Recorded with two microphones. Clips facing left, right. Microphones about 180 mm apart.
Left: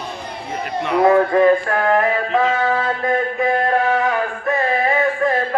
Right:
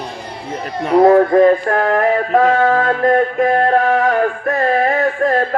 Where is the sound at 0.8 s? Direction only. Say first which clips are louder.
Right 5 dB; 40° right (ahead or behind).